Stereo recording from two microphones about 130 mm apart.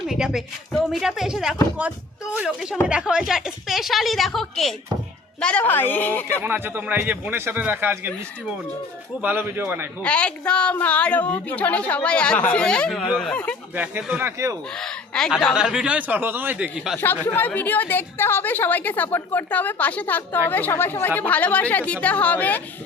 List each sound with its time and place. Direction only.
0.1 s a woman's voice: 5° right (ahead or behind); by 6.2 s 15° left (ahead or behind)
6.4 s a man's voice: 15° right (ahead or behind)
9.2 s a man's voice: 15° right (ahead or behind)
10.0 s a woman's voice: 10° left (ahead or behind)
13.7 s a man's voice: 10° right (ahead or behind)
14.8 s a woman's voice: 5° left (ahead or behind)
17.0 s a woman's voice: 15° left (ahead or behind)